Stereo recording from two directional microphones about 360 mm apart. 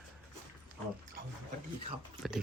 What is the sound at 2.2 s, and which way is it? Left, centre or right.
Speech, centre.